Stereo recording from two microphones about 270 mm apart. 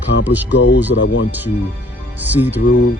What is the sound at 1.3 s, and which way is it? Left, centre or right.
Speech, centre.